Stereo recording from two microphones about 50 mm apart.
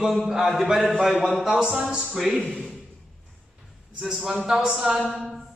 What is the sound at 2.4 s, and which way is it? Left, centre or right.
Speech, centre.